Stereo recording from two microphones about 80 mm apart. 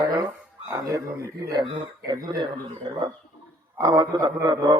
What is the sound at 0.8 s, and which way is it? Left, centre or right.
Speech, right.